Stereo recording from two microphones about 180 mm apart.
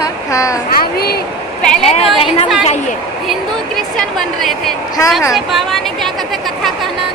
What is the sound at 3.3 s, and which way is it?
A woman's voice, centre (ahead or behind).